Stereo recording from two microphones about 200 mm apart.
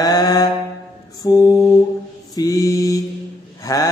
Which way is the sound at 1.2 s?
20° left (ahead or behind).